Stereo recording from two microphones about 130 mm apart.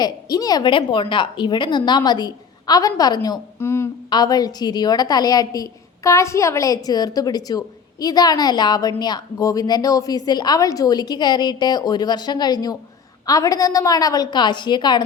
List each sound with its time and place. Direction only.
0.0 s a woman's voice: 30° left (ahead or behind)
3.6 s a woman's voice: 20° left (ahead or behind)
4.1 s a woman's voice: 30° left (ahead or behind)